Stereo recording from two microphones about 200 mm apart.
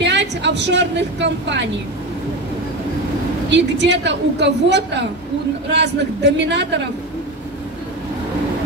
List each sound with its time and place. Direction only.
0.0 s a woman's voice: 60° right (ahead or behind)
3.4 s a woman's voice: 60° right (ahead or behind)